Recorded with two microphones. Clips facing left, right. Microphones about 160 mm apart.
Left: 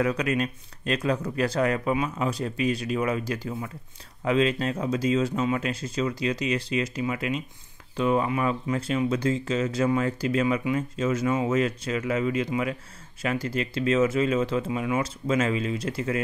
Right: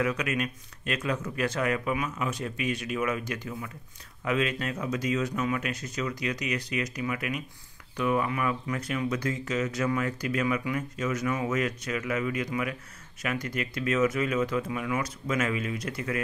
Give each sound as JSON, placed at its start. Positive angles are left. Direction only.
{"t": 0.0, "sound": "speech", "side_deg": 35}